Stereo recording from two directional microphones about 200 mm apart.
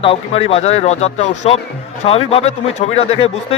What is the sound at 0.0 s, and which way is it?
A man's voice, 30° left (ahead or behind).